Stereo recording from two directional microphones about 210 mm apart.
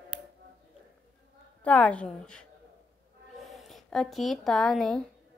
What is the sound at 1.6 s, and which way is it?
Speech, 5° left (ahead or behind).